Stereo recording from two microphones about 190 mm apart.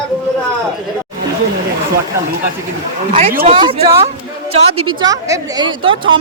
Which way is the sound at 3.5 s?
30° right (ahead or behind).